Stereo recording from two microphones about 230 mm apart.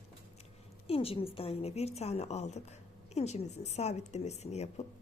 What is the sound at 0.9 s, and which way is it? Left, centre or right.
A woman's voice, left.